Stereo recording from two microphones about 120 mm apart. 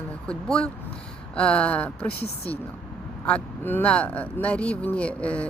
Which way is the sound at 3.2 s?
15° left (ahead or behind).